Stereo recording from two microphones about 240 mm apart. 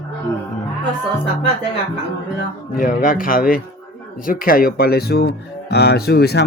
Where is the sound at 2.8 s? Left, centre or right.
Left.